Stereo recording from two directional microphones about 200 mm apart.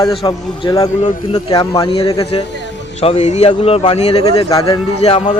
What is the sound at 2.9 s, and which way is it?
A man's voice, 30° left (ahead or behind).